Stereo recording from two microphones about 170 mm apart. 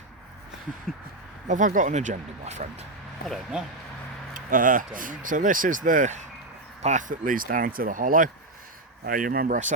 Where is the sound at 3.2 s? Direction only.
Centre (ahead or behind).